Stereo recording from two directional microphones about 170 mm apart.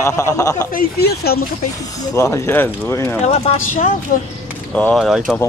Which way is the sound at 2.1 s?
15° left (ahead or behind).